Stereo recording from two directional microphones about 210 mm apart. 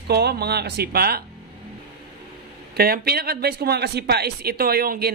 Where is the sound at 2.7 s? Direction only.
45° right (ahead or behind).